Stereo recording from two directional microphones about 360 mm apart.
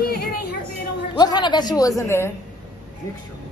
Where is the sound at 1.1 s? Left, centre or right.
Centre.